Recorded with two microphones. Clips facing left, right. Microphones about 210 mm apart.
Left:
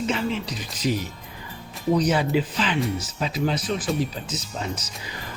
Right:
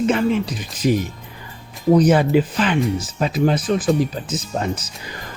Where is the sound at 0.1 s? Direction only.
55° right (ahead or behind).